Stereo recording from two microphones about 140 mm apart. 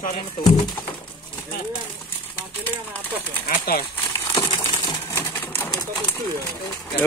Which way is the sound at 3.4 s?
90° left.